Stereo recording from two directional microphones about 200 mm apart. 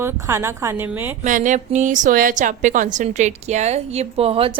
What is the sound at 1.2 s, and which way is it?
A woman's voice, 40° right (ahead or behind).